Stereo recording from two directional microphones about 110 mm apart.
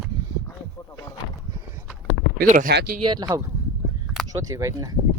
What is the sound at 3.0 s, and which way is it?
Speech, 45° right (ahead or behind).